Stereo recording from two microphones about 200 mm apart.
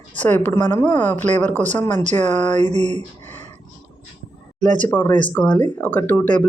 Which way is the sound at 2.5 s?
35° right (ahead or behind).